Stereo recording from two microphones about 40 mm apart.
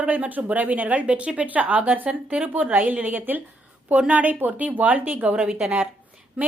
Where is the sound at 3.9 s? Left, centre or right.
Right.